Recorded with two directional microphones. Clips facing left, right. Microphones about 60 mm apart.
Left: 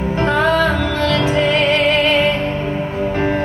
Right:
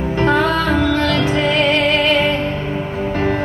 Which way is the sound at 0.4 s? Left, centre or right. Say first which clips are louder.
Left 1 dB; left.